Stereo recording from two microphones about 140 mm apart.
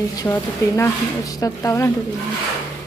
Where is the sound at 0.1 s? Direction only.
25° left (ahead or behind).